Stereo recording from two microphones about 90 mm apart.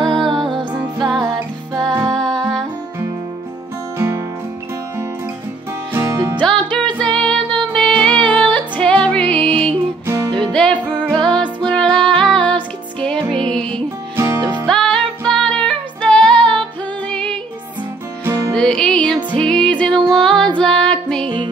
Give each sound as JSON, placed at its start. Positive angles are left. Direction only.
{"t": 0.0, "sound": "music", "side_deg": -60}
{"t": 1.1, "sound": "music", "side_deg": 0}
{"t": 5.9, "sound": "music", "side_deg": -25}
{"t": 6.3, "sound": "music", "side_deg": 10}
{"t": 14.1, "sound": "music", "side_deg": -30}
{"t": 14.7, "sound": "music", "side_deg": 5}
{"t": 18.5, "sound": "music", "side_deg": 10}
{"t": 19.9, "sound": "music", "side_deg": -65}
{"t": 20.5, "sound": "music", "side_deg": 10}